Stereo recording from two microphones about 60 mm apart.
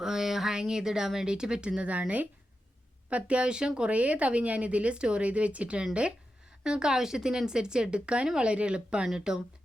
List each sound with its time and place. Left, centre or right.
0.0 s speech: centre